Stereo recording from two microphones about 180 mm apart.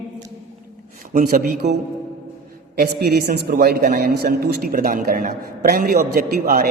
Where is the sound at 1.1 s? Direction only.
50° right (ahead or behind).